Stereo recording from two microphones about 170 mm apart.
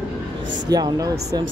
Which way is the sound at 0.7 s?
25° right (ahead or behind).